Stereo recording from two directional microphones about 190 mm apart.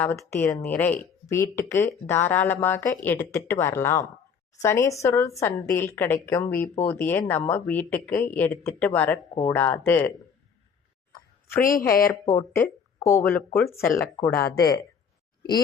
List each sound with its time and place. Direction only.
0.0 s speech: 10° left (ahead or behind)
11.6 s speech: 45° left (ahead or behind)
12.2 s speech: 15° left (ahead or behind)